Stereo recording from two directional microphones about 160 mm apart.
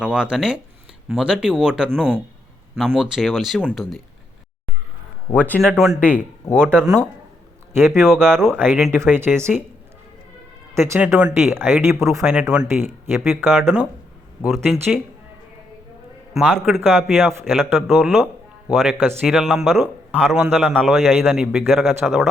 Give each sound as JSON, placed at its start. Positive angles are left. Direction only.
{"t": 0.0, "sound": "a man's voice", "side_deg": -5}
{"t": 5.3, "sound": "speech", "side_deg": 10}
{"t": 5.9, "sound": "speech", "side_deg": -10}
{"t": 6.1, "sound": "speech", "side_deg": 5}
{"t": 7.8, "sound": "speech", "side_deg": -15}
{"t": 10.8, "sound": "speech", "side_deg": -15}
{"t": 12.3, "sound": "speech", "side_deg": -5}
{"t": 13.5, "sound": "a man's voice", "side_deg": 0}
{"t": 16.3, "sound": "a man's voice", "side_deg": -5}
{"t": 17.0, "sound": "speech", "side_deg": -15}
{"t": 17.6, "sound": "a man's voice", "side_deg": 0}